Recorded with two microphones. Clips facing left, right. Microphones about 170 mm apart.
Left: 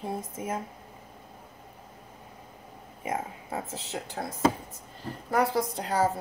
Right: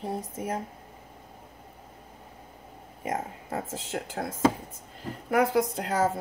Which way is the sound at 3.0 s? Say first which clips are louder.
Right 1 dB; 45° right (ahead or behind).